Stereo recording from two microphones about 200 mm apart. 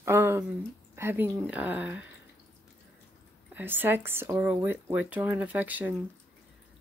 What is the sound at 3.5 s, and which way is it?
Speech, 10° right (ahead or behind).